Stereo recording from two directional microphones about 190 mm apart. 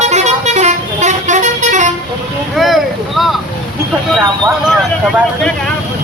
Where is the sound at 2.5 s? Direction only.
Centre (ahead or behind).